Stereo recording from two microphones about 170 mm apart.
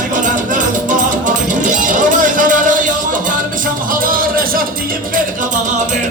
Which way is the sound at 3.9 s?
55° right (ahead or behind).